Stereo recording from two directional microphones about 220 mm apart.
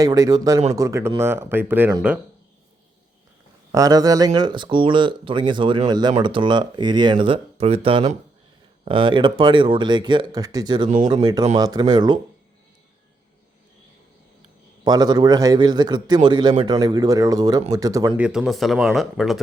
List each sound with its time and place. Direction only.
0.0 s speech: 15° right (ahead or behind)
3.7 s speech: 15° right (ahead or behind)
14.8 s speech: 20° right (ahead or behind)
18.3 s speech: centre (ahead or behind)